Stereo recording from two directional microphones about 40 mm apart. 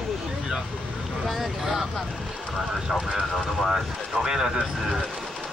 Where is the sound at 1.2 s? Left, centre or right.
Centre.